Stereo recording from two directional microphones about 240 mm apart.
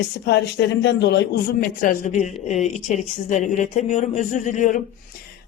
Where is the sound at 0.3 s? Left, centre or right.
Left.